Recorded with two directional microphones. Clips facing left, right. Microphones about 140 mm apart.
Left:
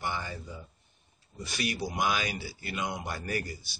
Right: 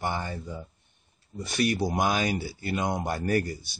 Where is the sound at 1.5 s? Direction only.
45° right (ahead or behind).